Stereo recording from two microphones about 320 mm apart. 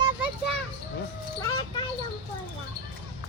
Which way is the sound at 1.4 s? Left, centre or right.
Centre.